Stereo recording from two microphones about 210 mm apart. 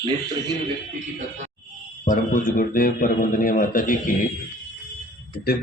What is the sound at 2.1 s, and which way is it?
Speech, 40° left (ahead or behind).